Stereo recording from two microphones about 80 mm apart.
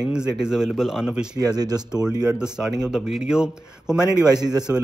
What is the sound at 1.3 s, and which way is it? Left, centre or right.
Speech, right.